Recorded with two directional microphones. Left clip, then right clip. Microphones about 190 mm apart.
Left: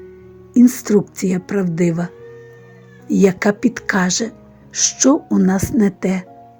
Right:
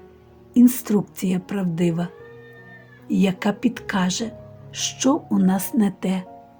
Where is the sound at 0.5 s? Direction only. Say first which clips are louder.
Left 5 dB; 25° left (ahead or behind).